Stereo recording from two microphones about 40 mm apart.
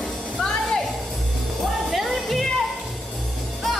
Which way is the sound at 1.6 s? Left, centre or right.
Centre.